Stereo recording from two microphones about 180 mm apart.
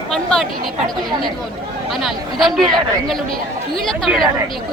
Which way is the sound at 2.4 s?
Centre (ahead or behind).